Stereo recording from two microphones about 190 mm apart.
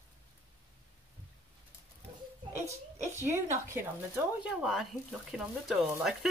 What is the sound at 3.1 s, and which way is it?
A woman's voice, 15° right (ahead or behind).